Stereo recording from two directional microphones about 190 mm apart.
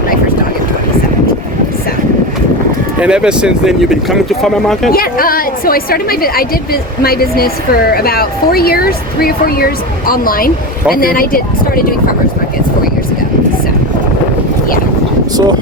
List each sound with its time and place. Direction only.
3.0 s speech: 5° right (ahead or behind)
4.9 s a woman's voice: 50° left (ahead or behind)